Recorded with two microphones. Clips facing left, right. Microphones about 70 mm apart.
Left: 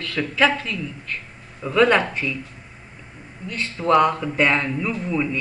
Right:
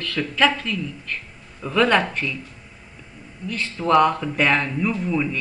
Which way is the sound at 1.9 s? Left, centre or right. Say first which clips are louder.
Even; centre.